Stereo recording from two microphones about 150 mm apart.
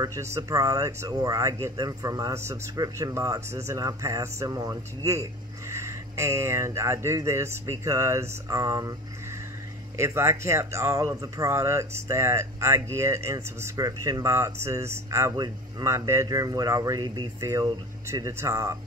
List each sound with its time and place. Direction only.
0.0 s speech: 20° right (ahead or behind)
9.9 s speech: 20° right (ahead or behind)